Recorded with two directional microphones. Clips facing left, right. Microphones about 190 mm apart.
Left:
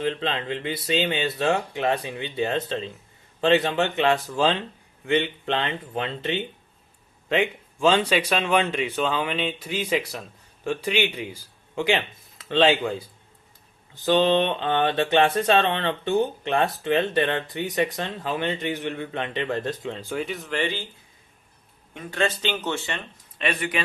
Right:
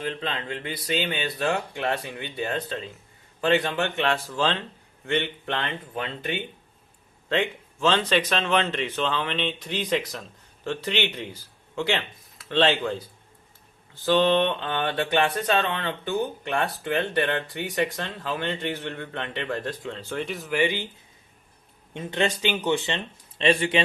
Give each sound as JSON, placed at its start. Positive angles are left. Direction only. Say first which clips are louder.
{"t": 0.0, "sound": "speech", "louder": "left 4 dB", "side_deg": 25}
{"t": 7.3, "sound": "speech", "louder": "left 2 dB", "side_deg": 15}
{"t": 20.2, "sound": "speech", "louder": "right 5 dB", "side_deg": 0}
{"t": 21.9, "sound": "speech", "louder": "even", "side_deg": -20}
{"t": 23.4, "sound": "speech", "louder": "right 5 dB", "side_deg": -25}